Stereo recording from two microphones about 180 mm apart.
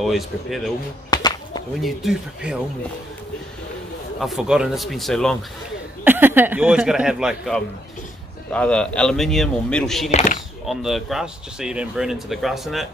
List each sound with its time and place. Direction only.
0.0 s speech: centre (ahead or behind)
1.1 s a sound: 20° left (ahead or behind)
1.8 s speech: centre (ahead or behind)
4.2 s speech: centre (ahead or behind)
6.0 s speech: 10° right (ahead or behind)
10.1 s a sound: 45° left (ahead or behind)
10.7 s speech: centre (ahead or behind)